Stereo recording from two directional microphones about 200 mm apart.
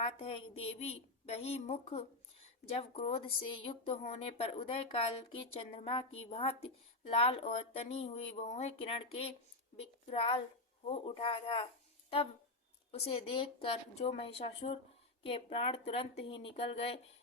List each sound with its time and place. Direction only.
0.0 s a woman's voice: 30° left (ahead or behind)
12.9 s a woman's voice: 30° left (ahead or behind)